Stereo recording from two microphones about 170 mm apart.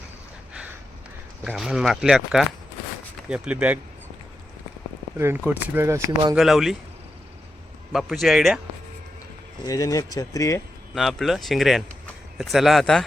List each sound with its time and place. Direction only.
1.5 s speech: 5° right (ahead or behind)
5.1 s speech: 15° right (ahead or behind)
6.3 s speech: centre (ahead or behind)
7.9 s speech: centre (ahead or behind)
9.6 s speech: 20° left (ahead or behind)
10.9 s speech: centre (ahead or behind)